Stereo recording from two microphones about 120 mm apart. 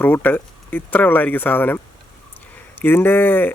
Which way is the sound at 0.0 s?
15° left (ahead or behind).